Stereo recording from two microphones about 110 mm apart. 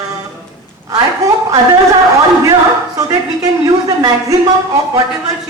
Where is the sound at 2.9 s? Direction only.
35° right (ahead or behind).